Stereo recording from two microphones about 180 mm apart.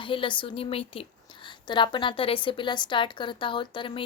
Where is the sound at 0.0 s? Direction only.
30° left (ahead or behind).